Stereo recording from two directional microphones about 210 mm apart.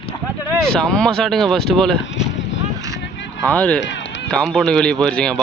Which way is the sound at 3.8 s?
60° left (ahead or behind).